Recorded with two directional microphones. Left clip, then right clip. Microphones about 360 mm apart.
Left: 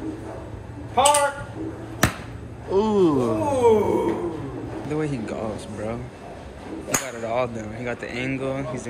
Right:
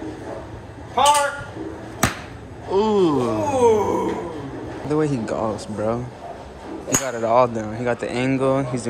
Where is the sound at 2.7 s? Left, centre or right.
Centre.